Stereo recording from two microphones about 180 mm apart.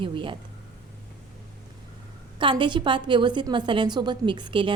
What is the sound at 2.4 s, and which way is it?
A woman's voice, 25° right (ahead or behind).